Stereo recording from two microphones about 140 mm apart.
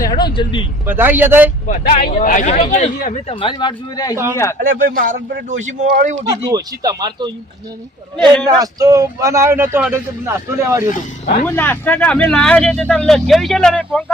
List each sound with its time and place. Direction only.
0.0 s vehicle: 30° left (ahead or behind)
0.9 s a man's voice: 15° right (ahead or behind)
1.6 s a man's voice: 70° left (ahead or behind)
3.2 s speech: 35° left (ahead or behind)
4.6 s a man's voice: 85° right
6.2 s speech: 25° right (ahead or behind)
8.4 s a man's voice: 25° right (ahead or behind)
11.4 s speech: 15° left (ahead or behind)